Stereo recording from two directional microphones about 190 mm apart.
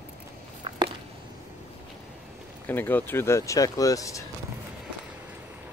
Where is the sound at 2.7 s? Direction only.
10° left (ahead or behind).